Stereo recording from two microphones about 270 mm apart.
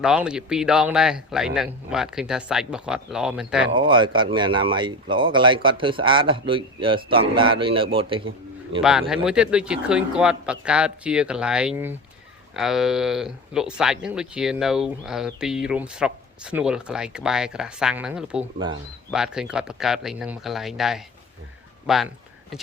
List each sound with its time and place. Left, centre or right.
0.0 s speech: centre
3.8 s speech: centre
8.8 s speech: centre